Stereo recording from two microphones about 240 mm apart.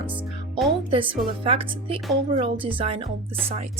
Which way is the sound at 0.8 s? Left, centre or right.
Right.